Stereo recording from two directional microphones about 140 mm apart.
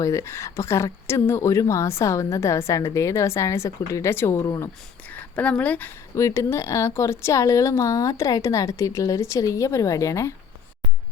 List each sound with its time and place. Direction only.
0.0 s a woman's voice: 20° left (ahead or behind)
5.1 s a woman's voice: 10° left (ahead or behind)